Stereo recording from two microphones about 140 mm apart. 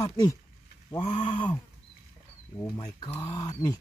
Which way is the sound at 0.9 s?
40° left (ahead or behind).